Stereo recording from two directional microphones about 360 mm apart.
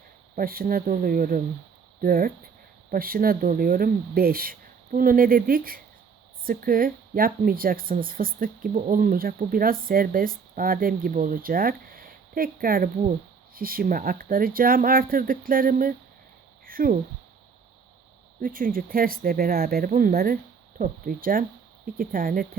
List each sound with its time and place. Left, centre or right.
0.3 s speech: right
18.3 s speech: right